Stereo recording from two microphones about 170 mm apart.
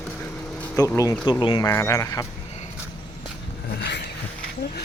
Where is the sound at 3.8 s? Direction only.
90° left.